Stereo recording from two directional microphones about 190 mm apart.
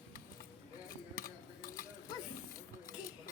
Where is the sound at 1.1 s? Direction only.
45° left (ahead or behind).